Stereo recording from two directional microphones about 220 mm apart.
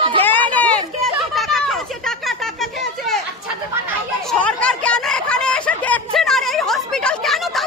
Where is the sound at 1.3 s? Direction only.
Centre (ahead or behind).